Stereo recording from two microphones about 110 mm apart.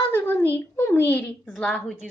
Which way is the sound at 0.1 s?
20° left (ahead or behind).